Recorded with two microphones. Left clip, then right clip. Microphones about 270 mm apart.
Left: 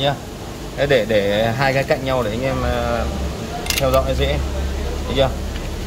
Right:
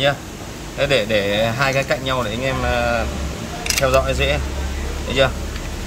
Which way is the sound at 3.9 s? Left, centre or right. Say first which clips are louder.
Even; centre.